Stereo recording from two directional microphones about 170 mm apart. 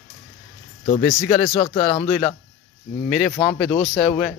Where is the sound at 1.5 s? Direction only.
30° left (ahead or behind).